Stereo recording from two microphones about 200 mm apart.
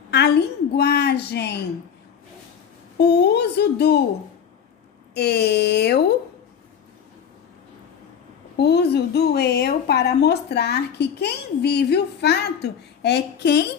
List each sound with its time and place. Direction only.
0.1 s a woman's voice: 55° left (ahead or behind)
3.0 s speech: 55° left (ahead or behind)
5.1 s speech: 55° left (ahead or behind)
8.5 s speech: 55° left (ahead or behind)